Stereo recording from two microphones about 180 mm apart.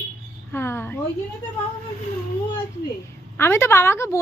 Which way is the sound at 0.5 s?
15° left (ahead or behind).